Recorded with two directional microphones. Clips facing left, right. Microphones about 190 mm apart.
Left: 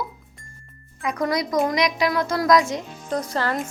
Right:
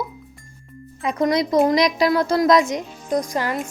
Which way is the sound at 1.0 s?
25° right (ahead or behind).